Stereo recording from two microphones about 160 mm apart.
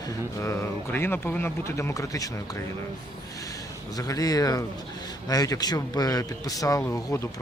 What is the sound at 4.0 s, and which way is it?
Speech, 20° left (ahead or behind).